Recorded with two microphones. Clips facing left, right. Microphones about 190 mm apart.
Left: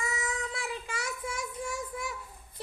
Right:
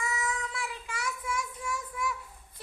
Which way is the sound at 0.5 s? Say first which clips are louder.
Left 2 dB; 30° left (ahead or behind).